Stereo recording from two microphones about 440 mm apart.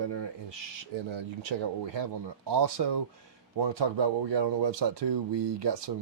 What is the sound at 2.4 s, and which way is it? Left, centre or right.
Speech, right.